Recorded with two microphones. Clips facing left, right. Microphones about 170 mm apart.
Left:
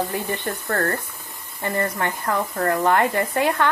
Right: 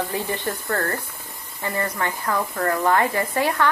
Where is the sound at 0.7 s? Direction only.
45° left (ahead or behind).